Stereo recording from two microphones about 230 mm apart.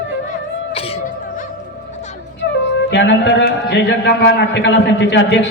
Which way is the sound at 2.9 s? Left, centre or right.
Left.